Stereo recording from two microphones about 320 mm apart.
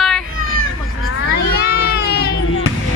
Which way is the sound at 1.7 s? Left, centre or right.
Left.